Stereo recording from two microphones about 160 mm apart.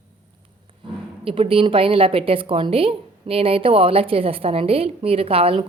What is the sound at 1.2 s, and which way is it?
A woman's voice, 35° right (ahead or behind).